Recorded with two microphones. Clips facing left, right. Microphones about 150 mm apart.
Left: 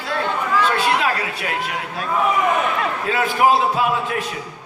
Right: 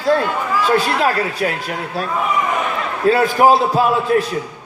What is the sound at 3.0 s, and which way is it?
A man's voice, 40° right (ahead or behind).